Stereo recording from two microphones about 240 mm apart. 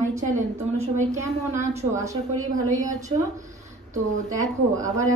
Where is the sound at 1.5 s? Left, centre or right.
Right.